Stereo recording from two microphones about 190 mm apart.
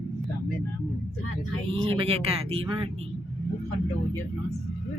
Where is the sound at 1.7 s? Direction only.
30° right (ahead or behind).